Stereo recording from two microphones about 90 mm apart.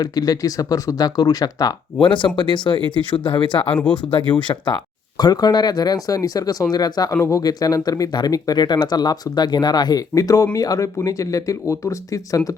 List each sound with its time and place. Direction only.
0.0 s speech: 45° left (ahead or behind)
2.0 s speech: 65° left (ahead or behind)
3.7 s speech: 15° left (ahead or behind)
4.4 s speech: 55° left (ahead or behind)
7.2 s speech: 35° left (ahead or behind)